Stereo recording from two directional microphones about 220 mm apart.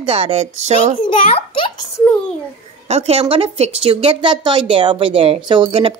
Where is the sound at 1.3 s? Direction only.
25° left (ahead or behind).